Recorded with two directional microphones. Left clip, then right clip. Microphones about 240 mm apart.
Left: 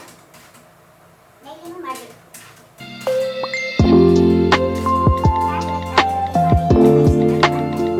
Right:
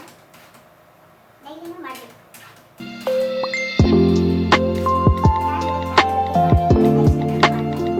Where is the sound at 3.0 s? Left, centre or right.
Centre.